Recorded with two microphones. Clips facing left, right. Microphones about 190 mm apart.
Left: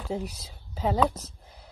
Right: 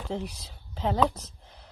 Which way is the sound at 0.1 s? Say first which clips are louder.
Left 2 dB; 10° left (ahead or behind).